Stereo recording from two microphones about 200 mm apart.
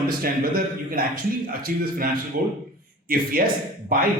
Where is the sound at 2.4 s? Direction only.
45° right (ahead or behind).